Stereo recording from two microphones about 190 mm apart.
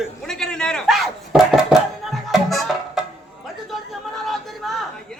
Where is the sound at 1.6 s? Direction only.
Centre (ahead or behind).